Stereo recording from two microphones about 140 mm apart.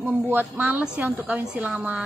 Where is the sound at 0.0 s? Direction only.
15° right (ahead or behind).